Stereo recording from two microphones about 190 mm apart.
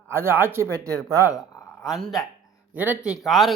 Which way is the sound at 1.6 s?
Centre (ahead or behind).